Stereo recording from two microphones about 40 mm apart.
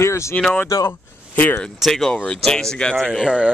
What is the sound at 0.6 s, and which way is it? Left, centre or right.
Speech, left.